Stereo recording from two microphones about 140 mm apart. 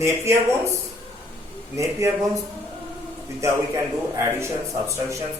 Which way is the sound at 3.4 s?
20° right (ahead or behind).